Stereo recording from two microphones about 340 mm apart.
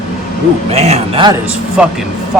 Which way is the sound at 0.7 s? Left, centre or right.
Centre.